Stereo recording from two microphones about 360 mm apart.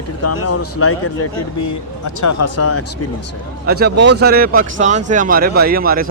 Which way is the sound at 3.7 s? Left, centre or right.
Right.